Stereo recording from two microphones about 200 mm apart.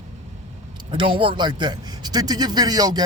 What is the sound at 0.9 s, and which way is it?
Speech, 25° right (ahead or behind).